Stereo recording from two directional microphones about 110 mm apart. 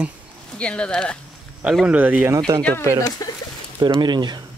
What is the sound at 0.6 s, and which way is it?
Speech, 10° left (ahead or behind).